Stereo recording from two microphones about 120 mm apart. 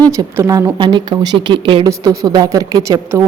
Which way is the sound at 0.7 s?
40° right (ahead or behind).